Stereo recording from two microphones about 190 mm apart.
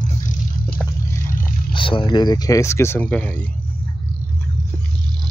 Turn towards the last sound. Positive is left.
turn(degrees=10)  # may be behind; listen again after turning